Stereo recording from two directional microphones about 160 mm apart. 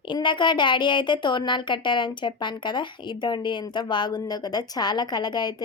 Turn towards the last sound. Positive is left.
turn(degrees=25)  # may be behind; listen again after turning